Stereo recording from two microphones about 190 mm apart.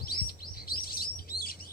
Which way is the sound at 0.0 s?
50° left (ahead or behind).